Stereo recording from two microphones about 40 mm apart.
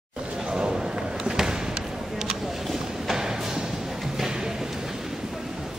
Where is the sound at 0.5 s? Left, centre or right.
Right.